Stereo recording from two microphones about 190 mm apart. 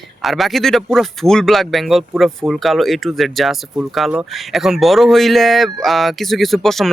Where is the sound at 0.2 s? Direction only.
Centre (ahead or behind).